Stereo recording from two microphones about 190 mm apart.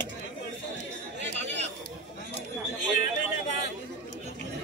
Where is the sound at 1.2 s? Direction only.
65° right (ahead or behind).